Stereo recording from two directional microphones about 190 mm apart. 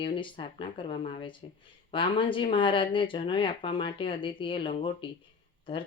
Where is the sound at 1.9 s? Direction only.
25° left (ahead or behind).